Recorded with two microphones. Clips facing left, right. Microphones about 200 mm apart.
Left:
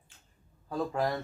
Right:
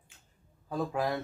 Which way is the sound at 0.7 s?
Centre (ahead or behind).